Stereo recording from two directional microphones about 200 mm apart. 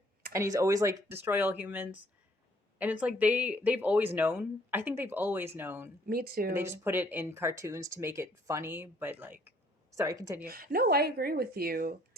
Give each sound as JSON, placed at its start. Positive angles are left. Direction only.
{"t": 0.3, "sound": "speech", "side_deg": -15}
{"t": 6.1, "sound": "speech", "side_deg": -50}
{"t": 6.5, "sound": "speech", "side_deg": -10}
{"t": 10.4, "sound": "speech", "side_deg": -50}